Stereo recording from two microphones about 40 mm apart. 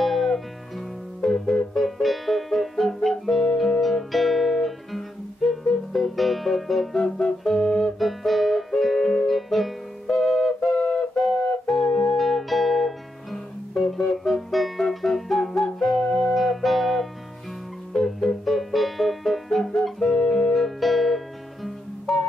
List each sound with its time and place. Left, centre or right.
0.0 s music: centre
7.0 s music: centre
8.0 s music: centre
12.2 s music: centre
20.5 s music: centre